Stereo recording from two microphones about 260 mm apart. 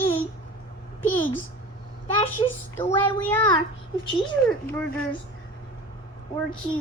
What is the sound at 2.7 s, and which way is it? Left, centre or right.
Speech, centre.